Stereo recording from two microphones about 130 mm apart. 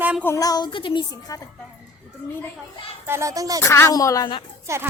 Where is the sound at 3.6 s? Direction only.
20° left (ahead or behind).